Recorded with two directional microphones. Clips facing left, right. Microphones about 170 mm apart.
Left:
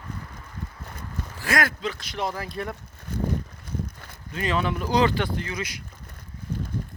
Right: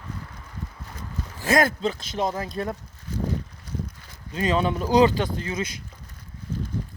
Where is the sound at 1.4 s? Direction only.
20° right (ahead or behind).